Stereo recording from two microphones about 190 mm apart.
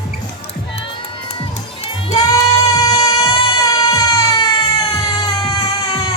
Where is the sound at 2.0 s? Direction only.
25° left (ahead or behind).